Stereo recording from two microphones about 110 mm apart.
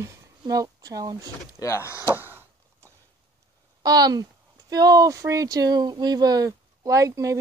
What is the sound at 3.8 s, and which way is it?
Speech, 35° right (ahead or behind).